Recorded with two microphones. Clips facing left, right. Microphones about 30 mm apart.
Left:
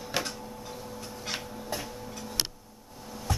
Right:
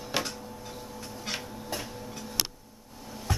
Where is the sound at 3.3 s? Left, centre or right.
Centre.